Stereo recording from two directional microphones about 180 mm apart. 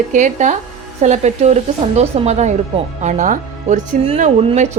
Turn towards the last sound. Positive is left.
turn(degrees=-35)  # may be behind; listen again after turning